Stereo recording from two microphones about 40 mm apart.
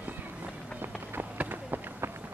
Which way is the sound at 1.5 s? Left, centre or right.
Right.